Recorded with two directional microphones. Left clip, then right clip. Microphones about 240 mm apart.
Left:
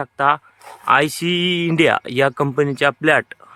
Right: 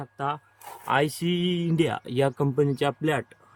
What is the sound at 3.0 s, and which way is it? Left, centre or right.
Speech, left.